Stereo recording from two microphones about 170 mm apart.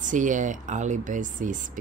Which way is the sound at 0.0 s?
50° right (ahead or behind).